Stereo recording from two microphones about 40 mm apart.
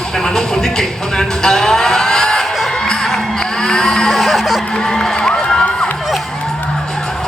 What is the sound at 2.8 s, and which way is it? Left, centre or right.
Music, centre.